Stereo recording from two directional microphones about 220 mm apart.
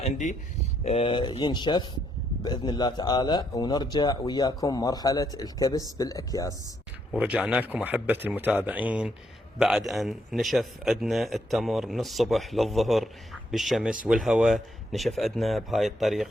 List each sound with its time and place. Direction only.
0.0 s speech: 35° left (ahead or behind); by 6.5 s 15° left (ahead or behind)
7.1 s a man's voice: 5° right (ahead or behind)